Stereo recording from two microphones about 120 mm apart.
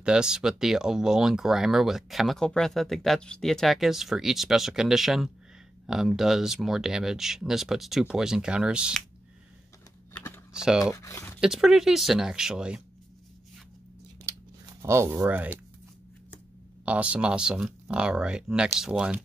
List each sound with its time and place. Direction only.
0.0 s speech: 5° right (ahead or behind)
10.5 s speech: 5° right (ahead or behind)
11.0 s speech: 25° left (ahead or behind)
11.4 s speech: 5° right (ahead or behind)
14.2 s scissors: 25° right (ahead or behind)
16.8 s speech: 10° right (ahead or behind)